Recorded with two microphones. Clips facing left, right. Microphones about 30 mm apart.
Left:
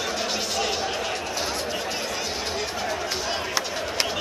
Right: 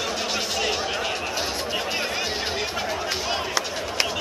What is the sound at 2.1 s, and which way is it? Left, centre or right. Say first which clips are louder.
Chop: right 2 dB; right.